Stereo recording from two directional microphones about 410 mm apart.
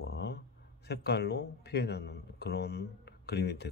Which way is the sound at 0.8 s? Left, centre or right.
Left.